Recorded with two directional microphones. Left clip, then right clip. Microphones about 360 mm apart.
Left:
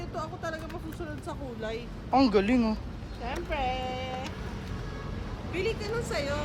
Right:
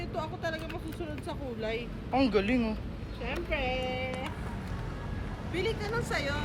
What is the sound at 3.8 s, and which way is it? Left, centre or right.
Speech, left.